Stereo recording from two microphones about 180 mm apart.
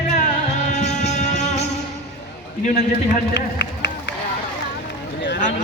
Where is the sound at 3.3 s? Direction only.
80° left.